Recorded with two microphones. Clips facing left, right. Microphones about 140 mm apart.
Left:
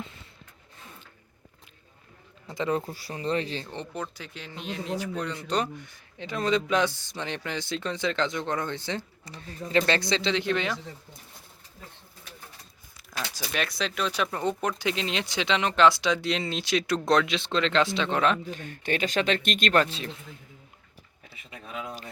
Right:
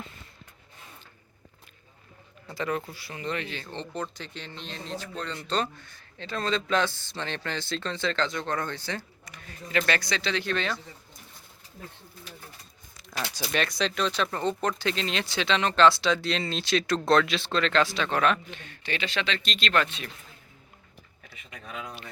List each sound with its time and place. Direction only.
2.5 s speech: 20° left (ahead or behind)
2.8 s speech: 40° left (ahead or behind)
3.7 s speech: 10° left (ahead or behind)
13.5 s speech: 5° left (ahead or behind); by 18.5 s 25° left (ahead or behind)
18.5 s speech: 45° left (ahead or behind)
21.5 s speech: 30° left (ahead or behind)